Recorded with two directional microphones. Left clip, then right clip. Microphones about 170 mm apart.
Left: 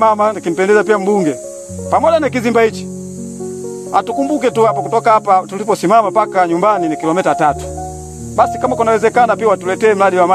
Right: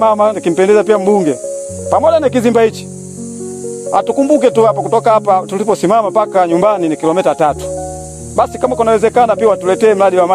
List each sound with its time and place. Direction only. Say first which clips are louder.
0.0 s speech: right 1 dB; 40° right (ahead or behind)
3.9 s speech: right 4 dB; 40° right (ahead or behind)